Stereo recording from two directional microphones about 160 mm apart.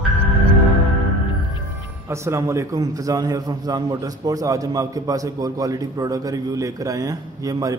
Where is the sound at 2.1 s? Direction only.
15° right (ahead or behind).